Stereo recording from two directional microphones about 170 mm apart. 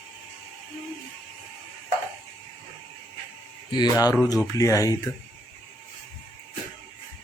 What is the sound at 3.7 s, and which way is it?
Speech, 25° left (ahead or behind).